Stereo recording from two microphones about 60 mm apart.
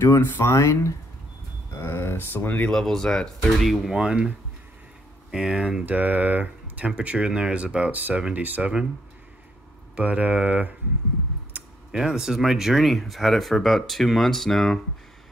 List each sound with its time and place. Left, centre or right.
0.4 s speech: left
1.8 s speech: left
2.1 s speech: left
2.7 s speech: centre
4.0 s speech: centre
5.3 s speech: centre
5.9 s speech: right
9.9 s speech: right
11.9 s speech: centre